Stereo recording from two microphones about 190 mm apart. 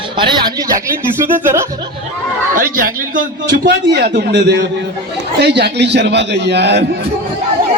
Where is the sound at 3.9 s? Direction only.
60° right (ahead or behind).